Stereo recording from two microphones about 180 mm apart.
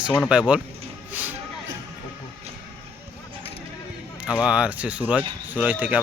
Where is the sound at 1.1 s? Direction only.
10° right (ahead or behind).